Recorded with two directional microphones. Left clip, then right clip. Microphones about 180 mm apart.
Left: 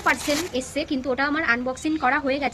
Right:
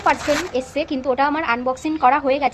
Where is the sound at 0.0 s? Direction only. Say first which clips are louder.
Right 4 dB; 20° left (ahead or behind).